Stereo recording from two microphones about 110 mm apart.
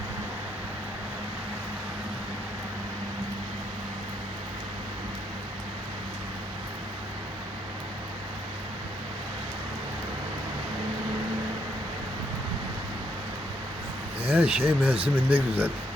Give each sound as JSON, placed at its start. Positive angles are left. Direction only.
{"t": 14.3, "sound": "speech", "side_deg": -15}